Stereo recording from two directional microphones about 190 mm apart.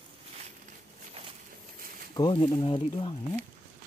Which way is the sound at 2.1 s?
25° left (ahead or behind).